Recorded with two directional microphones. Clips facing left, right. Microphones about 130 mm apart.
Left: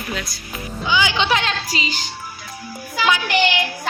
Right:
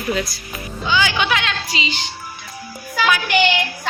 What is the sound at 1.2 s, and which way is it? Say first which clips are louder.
Speech: left 1 dB; 35° left (ahead or behind).